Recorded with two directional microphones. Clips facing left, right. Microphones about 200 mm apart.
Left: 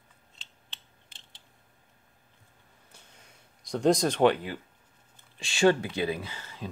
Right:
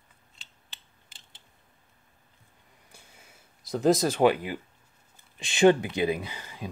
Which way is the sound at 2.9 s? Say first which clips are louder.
Right 2 dB; 10° right (ahead or behind).